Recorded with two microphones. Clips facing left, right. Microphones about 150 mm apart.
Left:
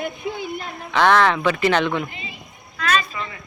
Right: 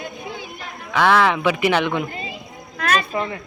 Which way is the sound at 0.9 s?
5° right (ahead or behind).